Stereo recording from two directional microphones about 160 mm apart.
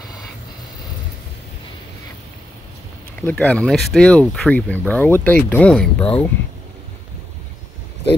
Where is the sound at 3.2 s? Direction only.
10° left (ahead or behind).